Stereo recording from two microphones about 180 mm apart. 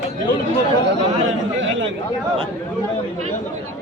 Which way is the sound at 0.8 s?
90° right.